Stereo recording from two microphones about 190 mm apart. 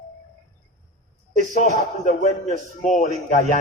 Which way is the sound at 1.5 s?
40° left (ahead or behind).